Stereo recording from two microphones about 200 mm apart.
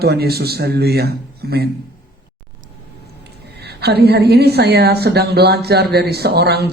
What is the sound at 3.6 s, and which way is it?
A woman's voice, 55° right (ahead or behind).